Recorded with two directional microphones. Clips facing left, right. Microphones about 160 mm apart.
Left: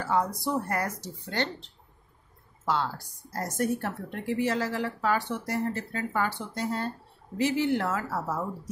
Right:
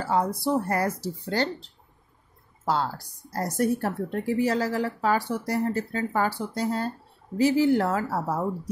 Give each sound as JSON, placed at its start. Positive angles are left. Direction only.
{"t": 0.0, "sound": "a woman's voice", "side_deg": -30}